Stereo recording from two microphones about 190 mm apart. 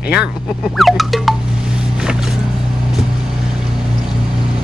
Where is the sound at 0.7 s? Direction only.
Centre (ahead or behind).